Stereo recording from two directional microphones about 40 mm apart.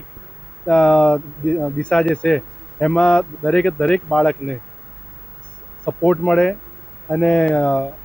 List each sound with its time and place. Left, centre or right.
0.7 s speech: left
5.8 s speech: left